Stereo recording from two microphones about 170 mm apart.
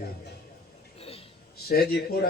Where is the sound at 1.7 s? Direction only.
65° left (ahead or behind).